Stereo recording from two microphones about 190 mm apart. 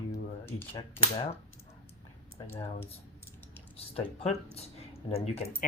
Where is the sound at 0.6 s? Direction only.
10° left (ahead or behind).